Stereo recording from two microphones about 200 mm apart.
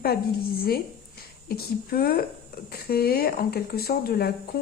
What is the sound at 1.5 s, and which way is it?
A woman's voice, 50° left (ahead or behind).